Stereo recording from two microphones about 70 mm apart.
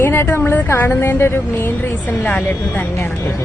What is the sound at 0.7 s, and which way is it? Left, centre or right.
A woman's voice, left.